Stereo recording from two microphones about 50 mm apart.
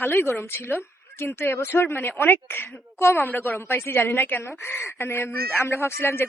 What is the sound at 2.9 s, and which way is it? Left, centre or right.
A woman's voice, left.